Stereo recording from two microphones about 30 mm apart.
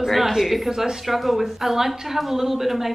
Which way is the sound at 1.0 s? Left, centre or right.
Centre.